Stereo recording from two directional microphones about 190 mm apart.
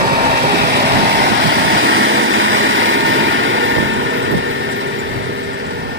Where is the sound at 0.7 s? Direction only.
65° right (ahead or behind); by 4.7 s 85° right.